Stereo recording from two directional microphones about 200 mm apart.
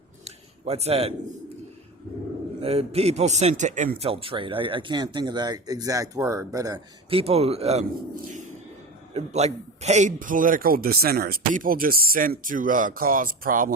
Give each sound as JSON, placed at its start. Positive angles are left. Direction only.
{"t": 0.3, "sound": "a sound", "side_deg": -30}
{"t": 2.6, "sound": "a man's voice", "side_deg": -30}
{"t": 9.1, "sound": "a man's voice", "side_deg": -35}